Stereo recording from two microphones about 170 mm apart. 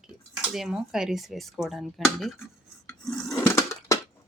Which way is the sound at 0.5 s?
Centre (ahead or behind).